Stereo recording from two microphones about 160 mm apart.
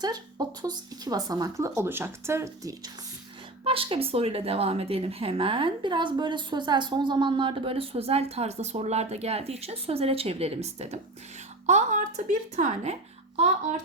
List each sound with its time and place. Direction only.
0.0 s speech: 25° right (ahead or behind)
3.6 s a woman's voice: 35° right (ahead or behind)